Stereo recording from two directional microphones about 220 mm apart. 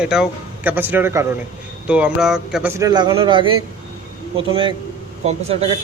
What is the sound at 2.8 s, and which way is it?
A man's voice, 20° right (ahead or behind).